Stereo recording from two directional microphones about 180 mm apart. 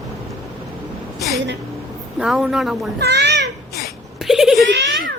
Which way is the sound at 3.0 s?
70° right (ahead or behind).